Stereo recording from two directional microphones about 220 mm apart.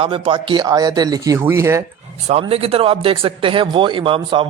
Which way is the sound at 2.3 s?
30° right (ahead or behind).